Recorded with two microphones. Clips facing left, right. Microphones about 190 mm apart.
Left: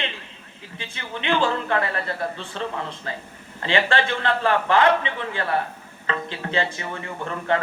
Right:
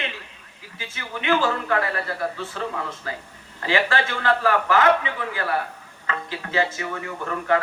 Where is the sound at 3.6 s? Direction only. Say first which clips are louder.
Left 1 dB; 25° left (ahead or behind).